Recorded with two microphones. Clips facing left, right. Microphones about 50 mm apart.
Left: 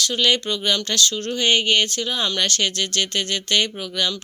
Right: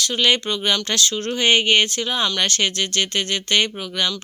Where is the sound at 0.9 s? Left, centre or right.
Right.